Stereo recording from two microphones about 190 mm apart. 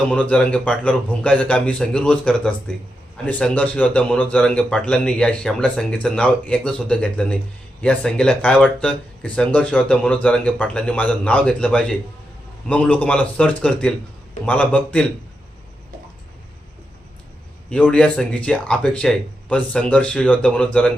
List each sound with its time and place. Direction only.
0.1 s a man's voice: 5° left (ahead or behind)
17.7 s a man's voice: 5° left (ahead or behind)